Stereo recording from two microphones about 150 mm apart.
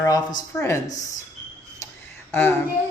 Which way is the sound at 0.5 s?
20° left (ahead or behind).